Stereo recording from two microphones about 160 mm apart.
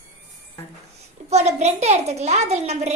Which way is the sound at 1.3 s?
45° right (ahead or behind).